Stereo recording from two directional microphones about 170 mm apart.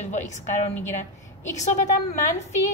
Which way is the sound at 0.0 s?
45° left (ahead or behind).